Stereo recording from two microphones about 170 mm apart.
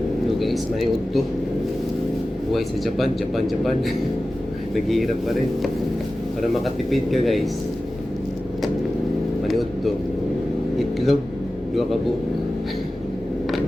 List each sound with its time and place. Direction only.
0.3 s speech: centre (ahead or behind)
2.5 s speech: centre (ahead or behind)
6.4 s speech: centre (ahead or behind)
9.4 s vehicle: centre (ahead or behind)
11.7 s a man's voice: centre (ahead or behind)